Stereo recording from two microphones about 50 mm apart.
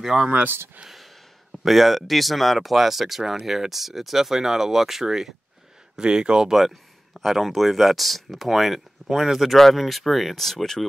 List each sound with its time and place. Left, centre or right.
0.0 s speech: centre
1.5 s speech: centre
5.9 s speech: centre
7.2 s speech: centre